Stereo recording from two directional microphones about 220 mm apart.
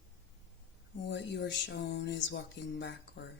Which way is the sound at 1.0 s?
55° left (ahead or behind).